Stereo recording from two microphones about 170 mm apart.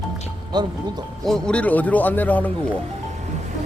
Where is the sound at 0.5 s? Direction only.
25° right (ahead or behind).